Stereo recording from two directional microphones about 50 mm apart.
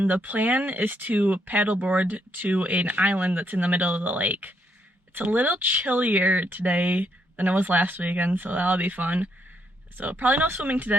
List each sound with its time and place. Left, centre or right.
0.0 s speech: right